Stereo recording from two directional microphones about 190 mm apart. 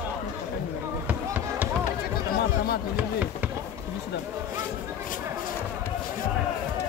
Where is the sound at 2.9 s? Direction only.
10° right (ahead or behind).